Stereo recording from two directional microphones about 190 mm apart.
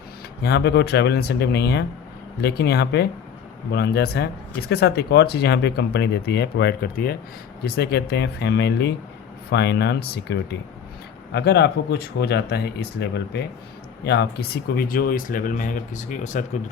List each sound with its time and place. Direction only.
0.4 s speech: 60° left (ahead or behind); by 16.4 s 40° left (ahead or behind)